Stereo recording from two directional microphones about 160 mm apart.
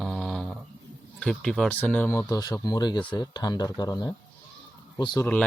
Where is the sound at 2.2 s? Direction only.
20° left (ahead or behind).